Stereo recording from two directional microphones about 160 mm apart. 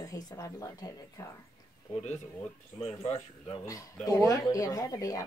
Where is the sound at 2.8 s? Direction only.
30° left (ahead or behind).